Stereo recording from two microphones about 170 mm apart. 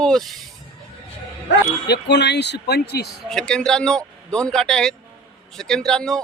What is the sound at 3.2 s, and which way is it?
Speech, 5° left (ahead or behind).